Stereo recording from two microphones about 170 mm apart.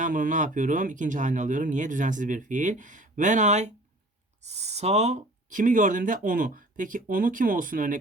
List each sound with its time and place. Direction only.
0.0 s speech: 50° right (ahead or behind)